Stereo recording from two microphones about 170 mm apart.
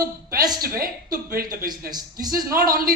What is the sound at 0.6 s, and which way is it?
A woman's voice, 60° right (ahead or behind).